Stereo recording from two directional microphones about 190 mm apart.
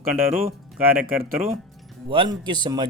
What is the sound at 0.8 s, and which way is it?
Speech, 50° right (ahead or behind).